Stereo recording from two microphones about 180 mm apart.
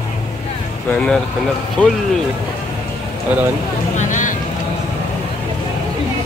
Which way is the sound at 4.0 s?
45° left (ahead or behind).